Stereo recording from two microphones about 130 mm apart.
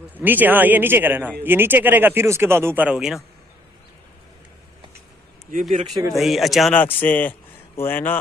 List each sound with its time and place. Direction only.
0.2 s a man's voice: 15° right (ahead or behind)
5.5 s speech: 75° right (ahead or behind)
6.1 s speech: centre (ahead or behind)
6.7 s a man's voice: 15° left (ahead or behind)